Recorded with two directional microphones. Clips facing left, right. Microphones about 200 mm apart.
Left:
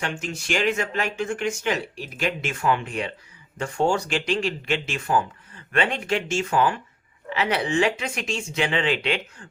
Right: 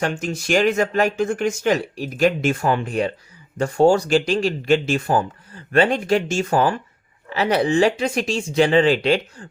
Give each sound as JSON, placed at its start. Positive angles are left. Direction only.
{"t": 0.0, "sound": "speech", "side_deg": -40}